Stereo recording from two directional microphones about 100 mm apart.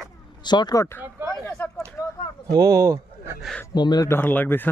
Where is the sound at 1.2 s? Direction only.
20° right (ahead or behind).